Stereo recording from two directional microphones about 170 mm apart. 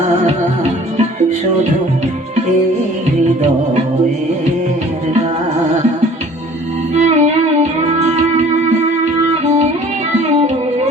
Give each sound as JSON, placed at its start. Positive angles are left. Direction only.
{"t": 6.9, "sound": "music", "side_deg": -40}